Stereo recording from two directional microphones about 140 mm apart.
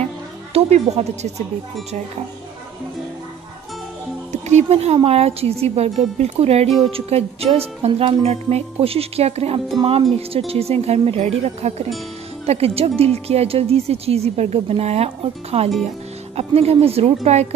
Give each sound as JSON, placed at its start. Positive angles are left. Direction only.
{"t": 0.5, "sound": "speech", "side_deg": -50}
{"t": 4.3, "sound": "speech", "side_deg": -55}